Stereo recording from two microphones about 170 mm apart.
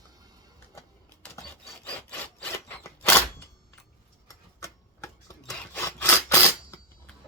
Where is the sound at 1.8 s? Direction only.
10° left (ahead or behind).